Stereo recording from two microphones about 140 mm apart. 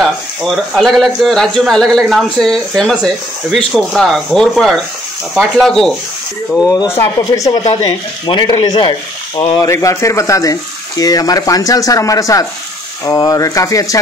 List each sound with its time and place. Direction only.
0.0 s speech: centre (ahead or behind)
6.6 s speech: 25° left (ahead or behind)
9.6 s speech: 20° left (ahead or behind)